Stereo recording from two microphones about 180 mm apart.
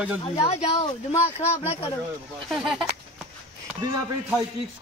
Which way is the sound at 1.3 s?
40° left (ahead or behind).